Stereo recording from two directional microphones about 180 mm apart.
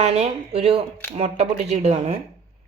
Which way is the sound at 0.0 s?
35° right (ahead or behind).